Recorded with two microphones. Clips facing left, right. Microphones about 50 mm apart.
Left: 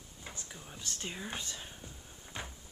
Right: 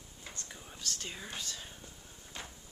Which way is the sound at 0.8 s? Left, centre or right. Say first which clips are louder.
Left 1 dB; left.